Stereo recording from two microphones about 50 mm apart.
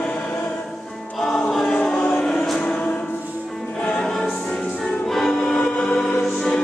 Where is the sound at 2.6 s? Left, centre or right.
Centre.